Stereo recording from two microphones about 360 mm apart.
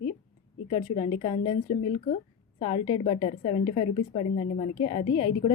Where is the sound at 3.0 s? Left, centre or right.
Centre.